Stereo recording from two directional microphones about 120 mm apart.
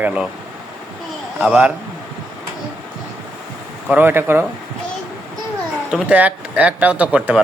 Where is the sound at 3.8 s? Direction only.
15° right (ahead or behind).